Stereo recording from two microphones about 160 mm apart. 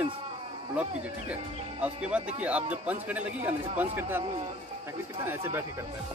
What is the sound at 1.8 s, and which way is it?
A man's voice, 5° right (ahead or behind).